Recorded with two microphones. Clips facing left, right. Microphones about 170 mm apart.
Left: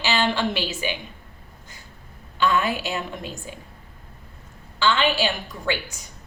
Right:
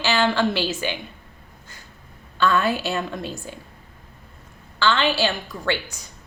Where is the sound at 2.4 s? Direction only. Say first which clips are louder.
Right 2 dB; 15° left (ahead or behind).